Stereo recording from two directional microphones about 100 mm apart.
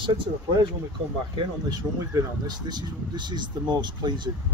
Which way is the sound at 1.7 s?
40° right (ahead or behind).